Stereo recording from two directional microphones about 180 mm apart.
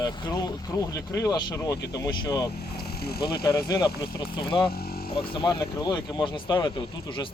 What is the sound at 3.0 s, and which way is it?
Speech, 60° left (ahead or behind).